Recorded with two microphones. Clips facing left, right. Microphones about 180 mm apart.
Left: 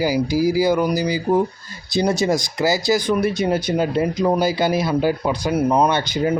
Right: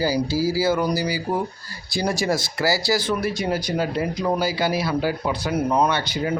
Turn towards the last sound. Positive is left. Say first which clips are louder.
# left 3 dB
turn(degrees=20)  # may be behind; listen again after turning